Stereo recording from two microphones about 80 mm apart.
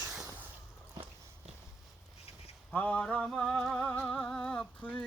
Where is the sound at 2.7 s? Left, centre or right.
Centre.